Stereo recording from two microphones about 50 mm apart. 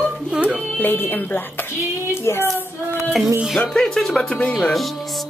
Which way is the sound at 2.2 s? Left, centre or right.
Left.